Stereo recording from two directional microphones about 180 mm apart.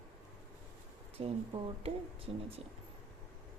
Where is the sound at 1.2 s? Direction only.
30° right (ahead or behind).